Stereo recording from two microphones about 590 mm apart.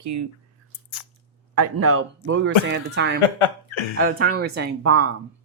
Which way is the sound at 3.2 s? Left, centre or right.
Left.